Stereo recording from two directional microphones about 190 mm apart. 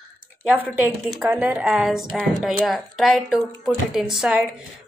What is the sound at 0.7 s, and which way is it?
A woman's voice, 5° right (ahead or behind).